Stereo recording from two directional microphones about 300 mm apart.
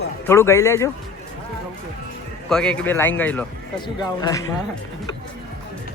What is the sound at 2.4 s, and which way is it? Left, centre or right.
Speech, centre.